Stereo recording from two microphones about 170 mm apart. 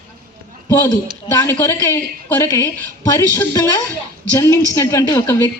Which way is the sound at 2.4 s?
20° left (ahead or behind).